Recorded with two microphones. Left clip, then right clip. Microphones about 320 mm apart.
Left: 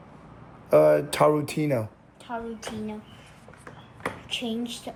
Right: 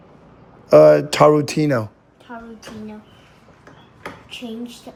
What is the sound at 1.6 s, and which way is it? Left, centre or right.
Speech, right.